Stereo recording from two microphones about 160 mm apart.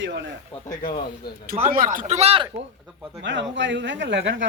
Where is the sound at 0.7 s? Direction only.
65° left (ahead or behind).